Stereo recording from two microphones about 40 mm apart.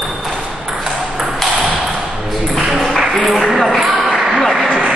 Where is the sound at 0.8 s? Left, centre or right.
Centre.